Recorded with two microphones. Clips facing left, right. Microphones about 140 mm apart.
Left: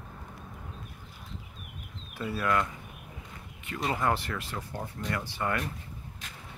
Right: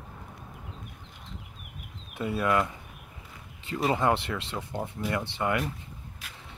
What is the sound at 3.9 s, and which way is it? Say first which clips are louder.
Speech: even; 25° right (ahead or behind).